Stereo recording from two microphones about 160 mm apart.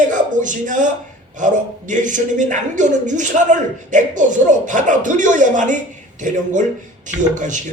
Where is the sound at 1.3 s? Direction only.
50° right (ahead or behind).